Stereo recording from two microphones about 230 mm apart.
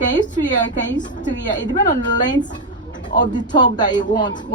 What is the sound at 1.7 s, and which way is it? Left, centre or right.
A woman's voice, centre.